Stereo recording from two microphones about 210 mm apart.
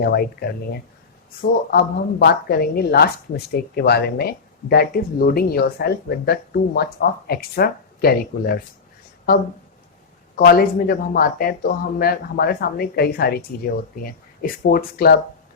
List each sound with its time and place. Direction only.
0.0 s speech: 50° left (ahead or behind)
10.3 s speech: 45° left (ahead or behind)